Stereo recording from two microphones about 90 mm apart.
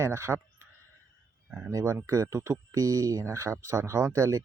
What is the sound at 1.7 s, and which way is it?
Speech, 35° right (ahead or behind).